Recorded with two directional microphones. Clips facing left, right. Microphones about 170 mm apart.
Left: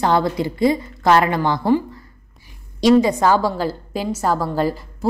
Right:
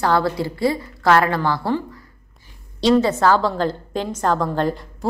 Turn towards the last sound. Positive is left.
turn(degrees=5)  # may be behind; listen again after turning